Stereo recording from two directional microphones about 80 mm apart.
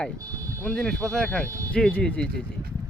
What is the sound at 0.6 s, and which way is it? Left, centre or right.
Speech, centre.